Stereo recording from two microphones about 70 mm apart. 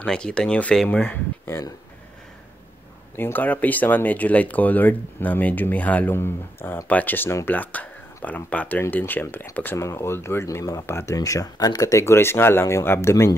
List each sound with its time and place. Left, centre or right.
0.0 s speech: centre
3.2 s speech: left
6.1 s speech: left
9.8 s speech: left
11.1 s speech: left
12.1 s speech: left